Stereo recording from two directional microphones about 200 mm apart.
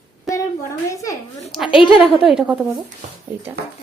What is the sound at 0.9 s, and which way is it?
Speech, 15° left (ahead or behind).